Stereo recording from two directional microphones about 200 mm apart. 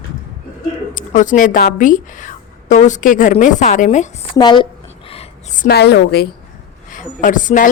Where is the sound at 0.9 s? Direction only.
40° left (ahead or behind).